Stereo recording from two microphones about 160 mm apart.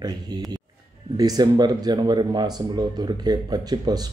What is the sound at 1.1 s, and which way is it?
Speech, 25° right (ahead or behind).